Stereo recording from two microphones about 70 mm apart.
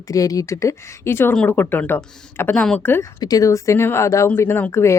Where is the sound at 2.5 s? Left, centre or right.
Centre.